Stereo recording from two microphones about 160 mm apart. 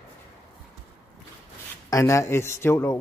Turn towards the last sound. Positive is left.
turn(degrees=15)  # may be behind; listen again after turning